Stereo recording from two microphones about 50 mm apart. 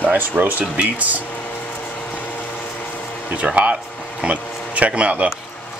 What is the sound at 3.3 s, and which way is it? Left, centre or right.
Speech, right.